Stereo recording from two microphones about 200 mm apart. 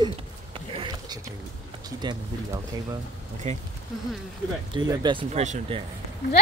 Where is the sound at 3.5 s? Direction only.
35° right (ahead or behind).